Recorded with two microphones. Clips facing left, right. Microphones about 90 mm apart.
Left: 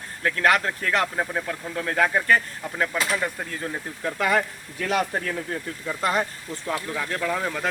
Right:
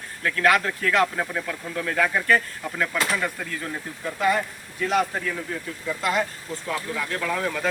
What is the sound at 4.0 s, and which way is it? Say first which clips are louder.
Speech: even; 80° left.